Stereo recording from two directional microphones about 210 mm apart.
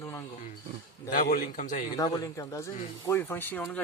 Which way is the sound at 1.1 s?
40° left (ahead or behind).